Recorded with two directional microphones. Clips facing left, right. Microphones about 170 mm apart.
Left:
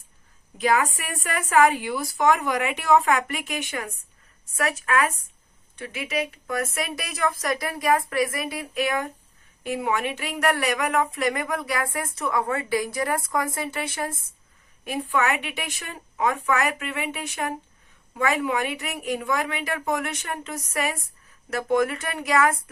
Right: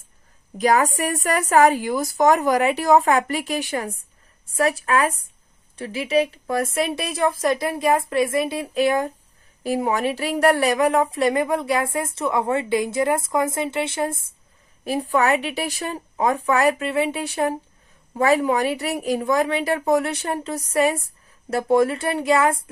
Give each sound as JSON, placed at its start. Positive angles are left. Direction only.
{"t": 0.6, "sound": "a woman's voice", "side_deg": -40}
{"t": 14.9, "sound": "a woman's voice", "side_deg": -35}